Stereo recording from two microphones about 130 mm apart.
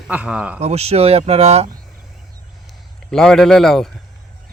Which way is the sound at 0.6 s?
55° right (ahead or behind).